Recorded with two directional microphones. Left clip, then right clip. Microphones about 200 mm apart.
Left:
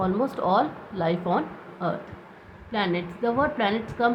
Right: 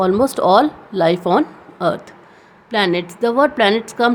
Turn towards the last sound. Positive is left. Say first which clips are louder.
# right 9 dB
turn(degrees=-65)  # may be behind; listen again after turning